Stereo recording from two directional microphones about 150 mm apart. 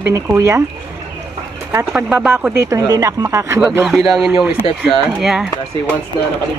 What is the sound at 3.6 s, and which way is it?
Speech, 5° right (ahead or behind).